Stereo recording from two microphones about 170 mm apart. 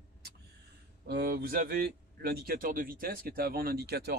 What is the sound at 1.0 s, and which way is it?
Speech, 70° right (ahead or behind).